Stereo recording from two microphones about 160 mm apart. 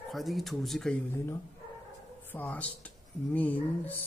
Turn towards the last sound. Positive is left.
turn(degrees=10)  # may be behind; listen again after turning